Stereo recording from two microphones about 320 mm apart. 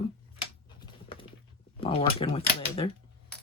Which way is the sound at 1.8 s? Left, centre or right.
Centre.